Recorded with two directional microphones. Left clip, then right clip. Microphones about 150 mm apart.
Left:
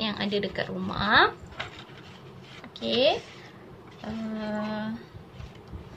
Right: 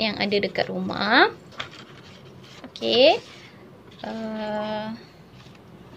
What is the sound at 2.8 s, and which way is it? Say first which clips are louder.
Speech: right 7 dB; 60° right (ahead or behind).